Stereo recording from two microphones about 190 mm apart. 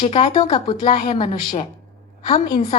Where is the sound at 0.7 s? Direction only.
25° left (ahead or behind).